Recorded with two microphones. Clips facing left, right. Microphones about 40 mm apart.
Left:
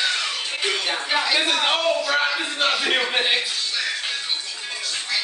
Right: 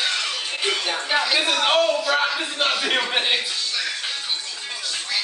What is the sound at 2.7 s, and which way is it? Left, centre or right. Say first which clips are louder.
Speech: left 1 dB; centre.